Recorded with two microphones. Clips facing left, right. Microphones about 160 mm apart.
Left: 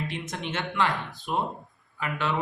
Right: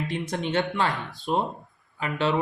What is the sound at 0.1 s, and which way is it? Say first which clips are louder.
Speech: right 6 dB; 35° right (ahead or behind).